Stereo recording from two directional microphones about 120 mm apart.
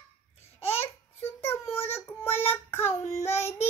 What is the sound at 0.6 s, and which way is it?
Babbling, 60° left (ahead or behind).